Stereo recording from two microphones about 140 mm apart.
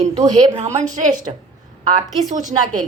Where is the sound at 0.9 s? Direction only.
65° right (ahead or behind).